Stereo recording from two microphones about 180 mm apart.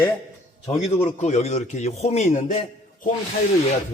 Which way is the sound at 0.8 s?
40° left (ahead or behind).